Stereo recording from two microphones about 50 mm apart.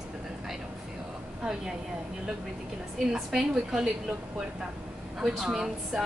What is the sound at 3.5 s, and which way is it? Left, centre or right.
Speech, centre.